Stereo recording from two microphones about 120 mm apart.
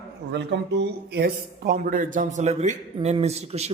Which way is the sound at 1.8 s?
90° right.